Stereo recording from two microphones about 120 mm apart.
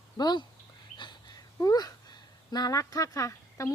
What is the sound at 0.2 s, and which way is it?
Speech, 35° left (ahead or behind).